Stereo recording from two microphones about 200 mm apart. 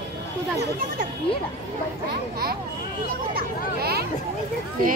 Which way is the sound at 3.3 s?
50° right (ahead or behind).